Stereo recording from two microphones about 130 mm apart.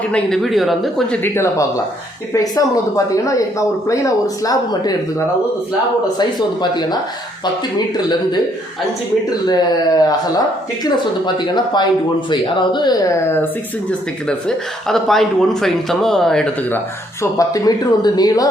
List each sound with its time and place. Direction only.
0.1 s speech: centre (ahead or behind)
1.2 s speech: 20° left (ahead or behind)
6.1 s speech: 35° left (ahead or behind)
9.5 s speech: 35° left (ahead or behind)
14.3 s speech: 5° left (ahead or behind)
17.3 s speech: 30° left (ahead or behind)